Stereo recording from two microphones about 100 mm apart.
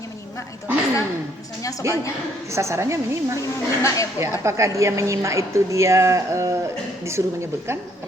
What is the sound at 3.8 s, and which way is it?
Speech, 35° left (ahead or behind).